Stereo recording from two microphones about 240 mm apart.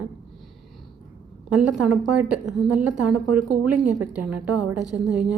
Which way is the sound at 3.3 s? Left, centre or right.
Right.